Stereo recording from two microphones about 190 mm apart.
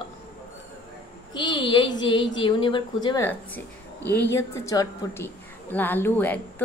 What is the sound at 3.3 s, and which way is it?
A woman's voice, 10° left (ahead or behind).